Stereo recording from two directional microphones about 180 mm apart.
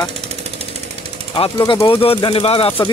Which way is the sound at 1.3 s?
25° left (ahead or behind).